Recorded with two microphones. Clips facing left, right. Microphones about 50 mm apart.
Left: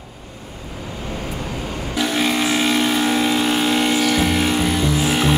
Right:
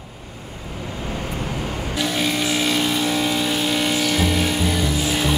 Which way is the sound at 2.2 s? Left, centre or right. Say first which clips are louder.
Left 4 dB; left.